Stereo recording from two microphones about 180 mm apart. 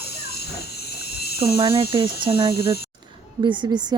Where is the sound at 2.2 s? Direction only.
20° right (ahead or behind).